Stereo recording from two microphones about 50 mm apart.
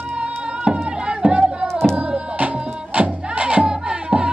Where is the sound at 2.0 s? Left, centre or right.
Right.